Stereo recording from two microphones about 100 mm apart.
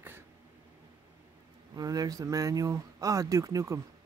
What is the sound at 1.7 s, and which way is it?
Speech, 40° right (ahead or behind).